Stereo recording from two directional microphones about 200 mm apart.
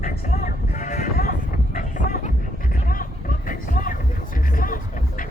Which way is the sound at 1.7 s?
40° left (ahead or behind).